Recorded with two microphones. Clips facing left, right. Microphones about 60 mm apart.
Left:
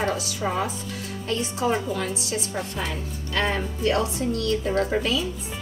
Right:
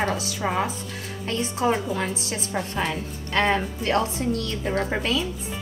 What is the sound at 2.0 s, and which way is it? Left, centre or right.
A woman's voice, right.